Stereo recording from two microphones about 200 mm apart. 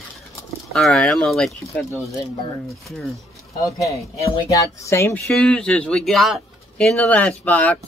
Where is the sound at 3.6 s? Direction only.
15° left (ahead or behind).